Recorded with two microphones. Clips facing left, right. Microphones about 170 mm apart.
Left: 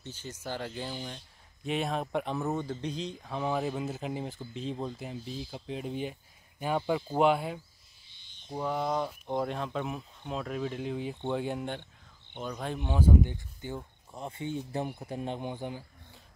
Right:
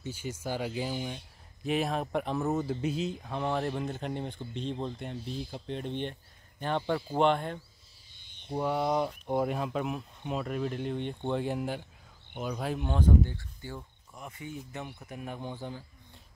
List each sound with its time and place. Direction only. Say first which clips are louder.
0.0 s speech: right 4 dB; 10° right (ahead or behind); by 7.6 s 5° left (ahead or behind)
8.5 s speech: right 2 dB; 5° right (ahead or behind)
13.3 s speech: left 3 dB; 20° left (ahead or behind)